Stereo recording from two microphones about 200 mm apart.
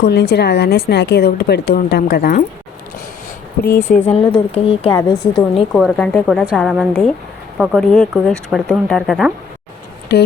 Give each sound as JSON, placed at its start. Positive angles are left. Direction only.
{"t": 0.0, "sound": "speech", "side_deg": 55}
{"t": 3.8, "sound": "speech", "side_deg": 35}
{"t": 5.7, "sound": "speech", "side_deg": 5}